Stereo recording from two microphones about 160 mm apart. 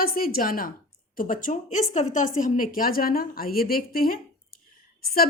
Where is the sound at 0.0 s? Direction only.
65° left (ahead or behind).